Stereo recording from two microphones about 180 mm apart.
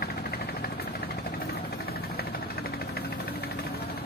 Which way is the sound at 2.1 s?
60° left (ahead or behind).